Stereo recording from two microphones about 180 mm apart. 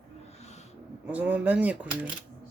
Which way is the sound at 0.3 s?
35° left (ahead or behind).